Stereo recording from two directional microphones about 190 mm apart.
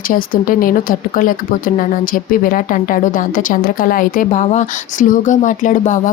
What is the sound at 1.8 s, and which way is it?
Speech, 50° left (ahead or behind).